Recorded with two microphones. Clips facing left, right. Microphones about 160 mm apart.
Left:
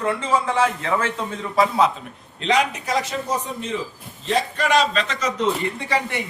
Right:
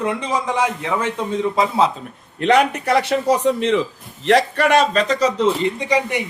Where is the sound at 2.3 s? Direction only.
60° right (ahead or behind); by 5.3 s 35° right (ahead or behind).